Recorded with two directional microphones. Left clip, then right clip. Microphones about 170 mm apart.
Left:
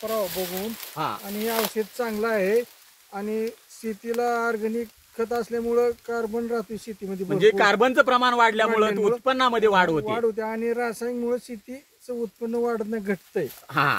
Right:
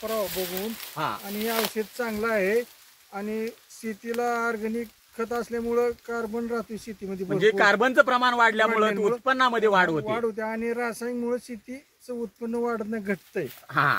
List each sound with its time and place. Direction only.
0.9 s speech: 35° left (ahead or behind)
1.2 s speech: 5° right (ahead or behind)
7.2 s speech: 55° left (ahead or behind)
10.0 s speech: centre (ahead or behind)
13.7 s speech: 55° left (ahead or behind)